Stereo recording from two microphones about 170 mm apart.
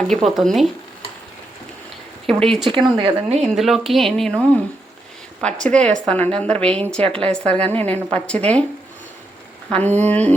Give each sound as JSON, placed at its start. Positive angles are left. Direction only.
{"t": 0.1, "sound": "speech", "side_deg": 0}
{"t": 2.2, "sound": "speech", "side_deg": 0}
{"t": 2.6, "sound": "speech", "side_deg": -30}
{"t": 3.5, "sound": "a woman's voice", "side_deg": 0}
{"t": 9.6, "sound": "a woman's voice", "side_deg": 5}